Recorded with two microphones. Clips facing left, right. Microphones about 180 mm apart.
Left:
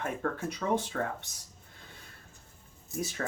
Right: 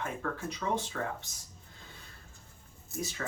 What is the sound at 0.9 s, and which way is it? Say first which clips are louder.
Speech: left 3 dB; 45° left (ahead or behind).